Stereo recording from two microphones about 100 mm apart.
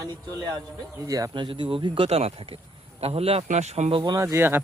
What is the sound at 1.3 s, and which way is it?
Speech, 55° right (ahead or behind).